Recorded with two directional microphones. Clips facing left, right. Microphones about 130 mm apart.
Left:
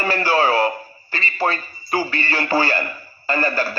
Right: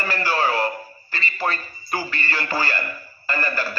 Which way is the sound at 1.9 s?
30° left (ahead or behind).